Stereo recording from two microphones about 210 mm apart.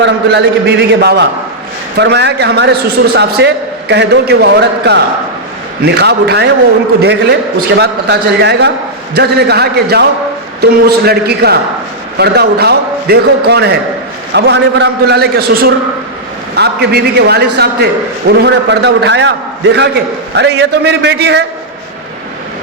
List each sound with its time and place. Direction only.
0.6 s a man's voice: 55° right (ahead or behind)
20.3 s a man's voice: 55° right (ahead or behind)